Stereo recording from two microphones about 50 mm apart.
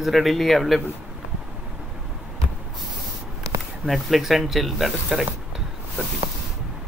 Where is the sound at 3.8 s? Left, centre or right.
Centre.